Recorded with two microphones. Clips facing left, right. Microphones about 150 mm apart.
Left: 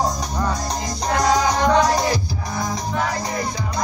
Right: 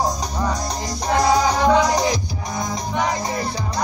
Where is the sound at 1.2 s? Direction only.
10° right (ahead or behind).